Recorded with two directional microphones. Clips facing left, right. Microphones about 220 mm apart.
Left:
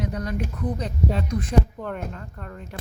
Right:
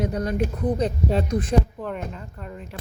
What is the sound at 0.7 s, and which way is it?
Speech, 30° right (ahead or behind).